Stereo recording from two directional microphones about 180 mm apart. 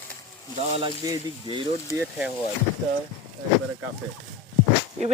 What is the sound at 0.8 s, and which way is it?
Speech, 20° right (ahead or behind).